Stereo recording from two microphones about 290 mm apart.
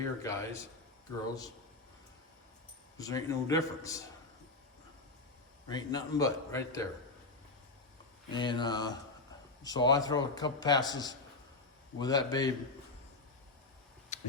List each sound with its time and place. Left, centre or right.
0.2 s a man's voice: centre
3.0 s a man's voice: centre
5.6 s a man's voice: centre
8.3 s a man's voice: centre
14.1 s a sound: left